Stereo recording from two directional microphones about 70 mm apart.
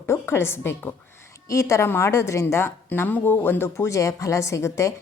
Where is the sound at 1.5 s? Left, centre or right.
Left.